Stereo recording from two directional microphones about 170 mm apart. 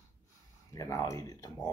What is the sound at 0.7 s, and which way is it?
Speech, 20° left (ahead or behind).